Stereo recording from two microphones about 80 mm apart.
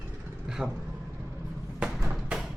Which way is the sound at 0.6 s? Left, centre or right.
Centre.